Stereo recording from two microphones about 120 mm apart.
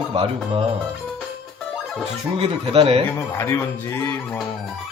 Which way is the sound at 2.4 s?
55° right (ahead or behind).